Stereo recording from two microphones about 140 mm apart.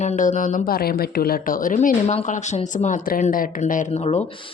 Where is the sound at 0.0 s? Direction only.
60° left (ahead or behind).